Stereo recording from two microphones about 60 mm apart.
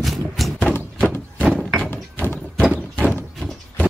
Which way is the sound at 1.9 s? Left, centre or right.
Left.